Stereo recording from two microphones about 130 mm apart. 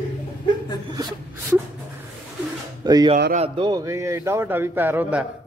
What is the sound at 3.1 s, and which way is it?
Speech, 45° right (ahead or behind).